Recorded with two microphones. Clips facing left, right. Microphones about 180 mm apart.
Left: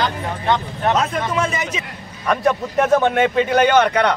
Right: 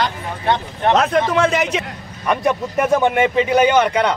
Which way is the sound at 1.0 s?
70° right (ahead or behind).